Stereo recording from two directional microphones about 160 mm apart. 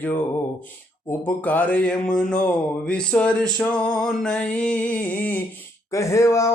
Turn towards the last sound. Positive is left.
turn(degrees=20)  # may be behind; listen again after turning